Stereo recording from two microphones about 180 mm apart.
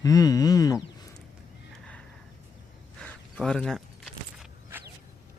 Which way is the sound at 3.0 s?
5° left (ahead or behind).